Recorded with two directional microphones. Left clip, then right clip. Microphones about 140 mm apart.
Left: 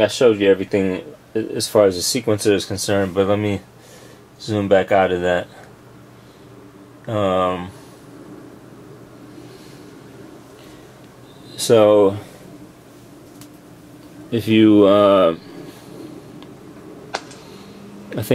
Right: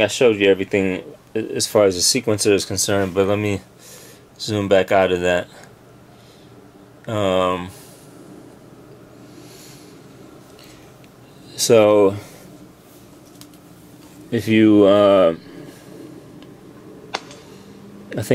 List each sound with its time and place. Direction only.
0.0 s speech: 20° right (ahead or behind)
7.1 s speech: 30° right (ahead or behind)
11.5 s speech: 20° right (ahead or behind)
14.3 s speech: 10° right (ahead or behind)
18.1 s a sound: 10° right (ahead or behind)